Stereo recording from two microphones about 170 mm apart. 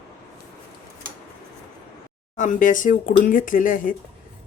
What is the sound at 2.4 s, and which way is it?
Speech, 50° left (ahead or behind).